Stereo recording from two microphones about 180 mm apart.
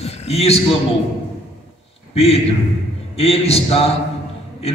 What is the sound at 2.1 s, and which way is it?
A man's voice, 35° left (ahead or behind).